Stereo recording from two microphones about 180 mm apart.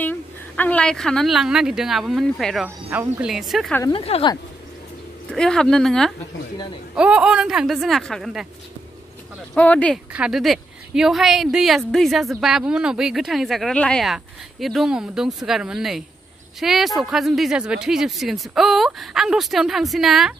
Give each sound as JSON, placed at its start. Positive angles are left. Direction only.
{"t": 0.0, "sound": "a woman's voice", "side_deg": 10}
{"t": 3.9, "sound": "a woman's voice", "side_deg": 30}
{"t": 5.3, "sound": "a woman's voice", "side_deg": 5}
{"t": 9.5, "sound": "speech", "side_deg": 10}
{"t": 10.1, "sound": "a woman's voice", "side_deg": -5}